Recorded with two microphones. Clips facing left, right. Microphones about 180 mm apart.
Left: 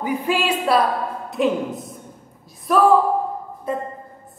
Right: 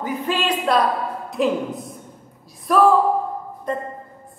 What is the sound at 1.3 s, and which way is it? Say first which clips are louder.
A woman's voice: even; centre (ahead or behind).